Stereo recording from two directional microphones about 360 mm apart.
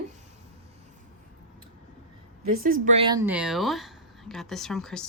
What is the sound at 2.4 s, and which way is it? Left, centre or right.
Speech, right.